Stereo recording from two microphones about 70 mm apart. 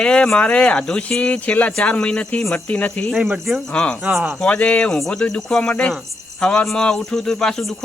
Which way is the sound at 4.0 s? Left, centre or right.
Centre.